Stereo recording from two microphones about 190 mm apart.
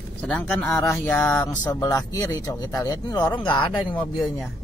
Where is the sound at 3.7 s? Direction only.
Centre (ahead or behind).